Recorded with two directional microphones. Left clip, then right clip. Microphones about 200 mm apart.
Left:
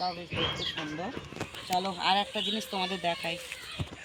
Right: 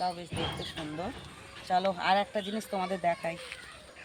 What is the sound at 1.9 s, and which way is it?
Speech, 10° right (ahead or behind).